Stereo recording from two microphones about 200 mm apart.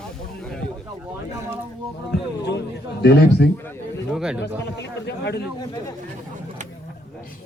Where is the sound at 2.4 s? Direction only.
60° left (ahead or behind).